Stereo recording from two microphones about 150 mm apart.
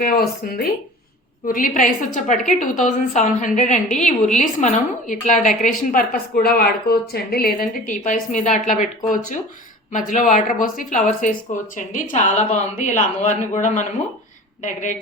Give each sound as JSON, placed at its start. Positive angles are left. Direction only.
{"t": 0.0, "sound": "speech", "side_deg": 80}
{"t": 1.5, "sound": "a woman's voice", "side_deg": 65}